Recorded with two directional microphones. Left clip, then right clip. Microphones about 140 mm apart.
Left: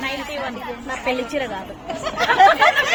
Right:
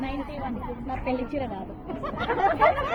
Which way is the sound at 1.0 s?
35° left (ahead or behind).